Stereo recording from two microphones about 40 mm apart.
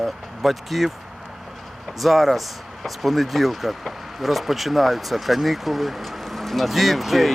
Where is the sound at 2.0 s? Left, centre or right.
Centre.